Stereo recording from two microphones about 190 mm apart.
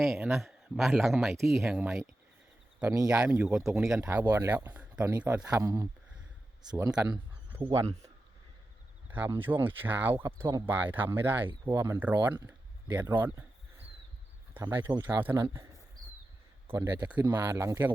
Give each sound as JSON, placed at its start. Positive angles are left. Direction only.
{"t": 0.0, "sound": "speech", "side_deg": 0}
{"t": 3.1, "sound": "speech", "side_deg": -5}
{"t": 9.0, "sound": "speech", "side_deg": -10}
{"t": 14.5, "sound": "speech", "side_deg": -10}
{"t": 16.6, "sound": "speech", "side_deg": -15}